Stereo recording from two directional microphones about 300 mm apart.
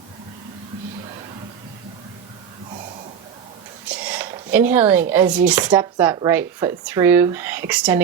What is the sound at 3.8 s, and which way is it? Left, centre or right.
Speech, centre.